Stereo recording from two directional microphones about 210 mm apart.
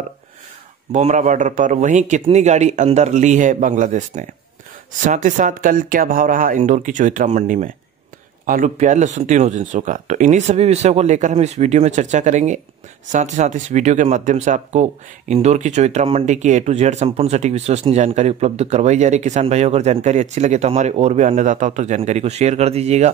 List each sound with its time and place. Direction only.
0.9 s speech: 35° right (ahead or behind)